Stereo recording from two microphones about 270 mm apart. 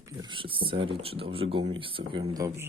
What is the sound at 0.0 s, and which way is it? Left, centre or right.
Speech, centre.